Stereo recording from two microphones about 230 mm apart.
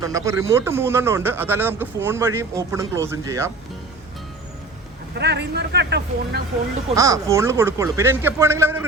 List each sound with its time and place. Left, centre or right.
0.0 s speech: centre
5.1 s speech: right
6.9 s speech: centre